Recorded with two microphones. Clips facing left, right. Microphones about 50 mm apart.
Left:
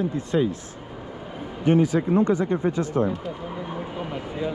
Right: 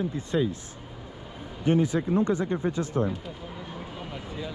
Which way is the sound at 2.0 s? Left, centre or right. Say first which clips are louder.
Left 4 dB; left.